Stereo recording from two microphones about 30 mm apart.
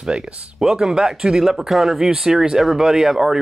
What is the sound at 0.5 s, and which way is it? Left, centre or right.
Speech, centre.